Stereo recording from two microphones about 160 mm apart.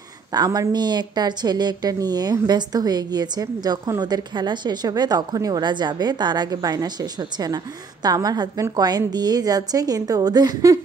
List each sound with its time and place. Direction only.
0.3 s speech: 25° right (ahead or behind)